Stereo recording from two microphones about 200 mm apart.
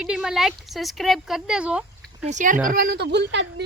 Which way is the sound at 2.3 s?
40° right (ahead or behind).